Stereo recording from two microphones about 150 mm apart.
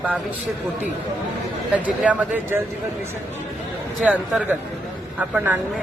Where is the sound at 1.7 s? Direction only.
10° right (ahead or behind).